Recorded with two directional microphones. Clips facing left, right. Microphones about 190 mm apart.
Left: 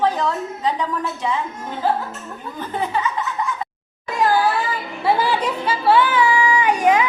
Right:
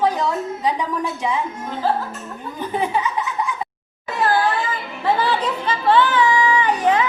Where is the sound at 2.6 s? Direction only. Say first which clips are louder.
Right 2 dB; 15° right (ahead or behind).